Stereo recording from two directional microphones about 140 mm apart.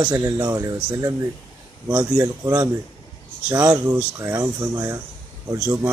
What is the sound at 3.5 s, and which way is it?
Speech, 20° right (ahead or behind).